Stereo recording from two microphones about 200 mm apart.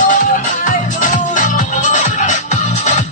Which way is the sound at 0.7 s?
40° left (ahead or behind).